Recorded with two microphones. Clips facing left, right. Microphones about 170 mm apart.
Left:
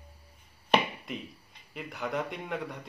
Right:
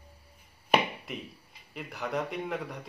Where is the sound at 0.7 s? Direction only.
10° right (ahead or behind).